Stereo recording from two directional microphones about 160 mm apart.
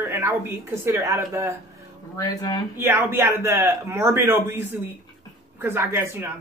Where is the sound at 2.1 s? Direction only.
20° left (ahead or behind).